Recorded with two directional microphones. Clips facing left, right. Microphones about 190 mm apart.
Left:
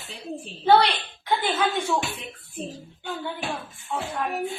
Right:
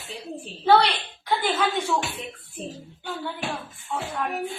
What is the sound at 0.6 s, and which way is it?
Speech, centre (ahead or behind).